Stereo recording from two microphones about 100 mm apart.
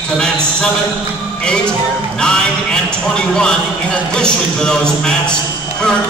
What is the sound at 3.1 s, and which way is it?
A man's voice, 5° left (ahead or behind).